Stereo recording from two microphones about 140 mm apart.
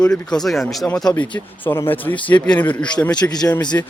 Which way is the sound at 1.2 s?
10° left (ahead or behind).